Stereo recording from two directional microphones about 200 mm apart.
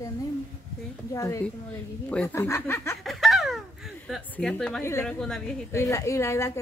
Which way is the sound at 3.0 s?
Centre (ahead or behind).